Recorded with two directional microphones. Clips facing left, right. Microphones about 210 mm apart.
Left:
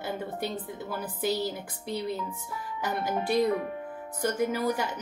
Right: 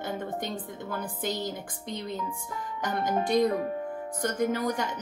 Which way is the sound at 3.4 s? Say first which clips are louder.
Even; 40° right (ahead or behind).